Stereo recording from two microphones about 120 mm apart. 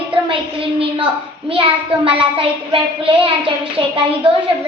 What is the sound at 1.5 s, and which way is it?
A child's voice, 50° right (ahead or behind).